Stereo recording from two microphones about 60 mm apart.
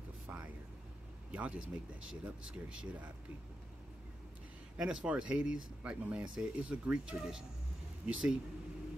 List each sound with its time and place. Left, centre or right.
0.3 s vehicle: right
1.3 s speech: right
4.7 s speech: centre